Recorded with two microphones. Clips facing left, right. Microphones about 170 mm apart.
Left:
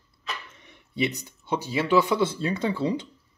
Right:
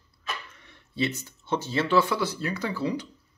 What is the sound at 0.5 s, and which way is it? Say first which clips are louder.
Speech: left 2 dB; 20° left (ahead or behind).